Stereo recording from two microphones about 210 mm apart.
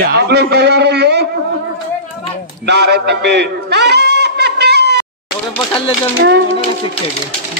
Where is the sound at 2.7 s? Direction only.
50° right (ahead or behind).